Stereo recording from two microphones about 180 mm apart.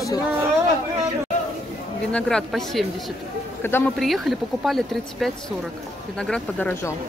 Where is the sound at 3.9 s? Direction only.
Centre (ahead or behind).